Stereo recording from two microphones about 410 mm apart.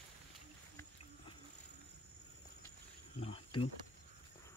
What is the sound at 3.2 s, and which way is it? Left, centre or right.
Cricket, centre.